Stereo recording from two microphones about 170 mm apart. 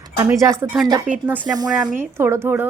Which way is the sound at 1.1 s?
50° right (ahead or behind).